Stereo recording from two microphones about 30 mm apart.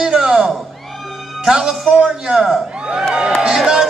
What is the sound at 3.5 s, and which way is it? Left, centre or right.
Music, right.